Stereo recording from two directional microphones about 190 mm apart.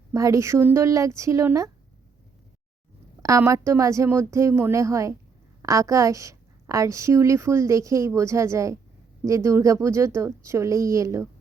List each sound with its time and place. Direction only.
0.1 s a woman's voice: 15° right (ahead or behind)
3.2 s a woman's voice: 15° right (ahead or behind)